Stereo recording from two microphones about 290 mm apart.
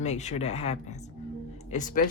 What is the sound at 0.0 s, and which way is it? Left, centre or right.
Speech, left.